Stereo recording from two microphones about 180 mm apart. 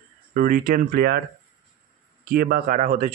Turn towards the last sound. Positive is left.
turn(degrees=-40)  # may be behind; listen again after turning